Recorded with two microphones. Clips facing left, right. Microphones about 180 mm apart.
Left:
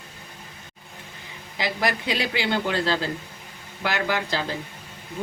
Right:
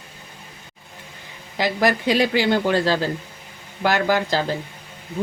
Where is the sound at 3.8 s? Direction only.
45° right (ahead or behind).